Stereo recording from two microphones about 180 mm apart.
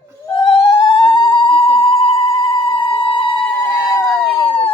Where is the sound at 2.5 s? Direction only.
30° left (ahead or behind).